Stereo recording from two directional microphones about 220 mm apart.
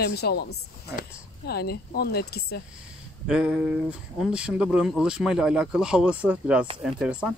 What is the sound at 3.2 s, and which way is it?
Speech, 5° right (ahead or behind).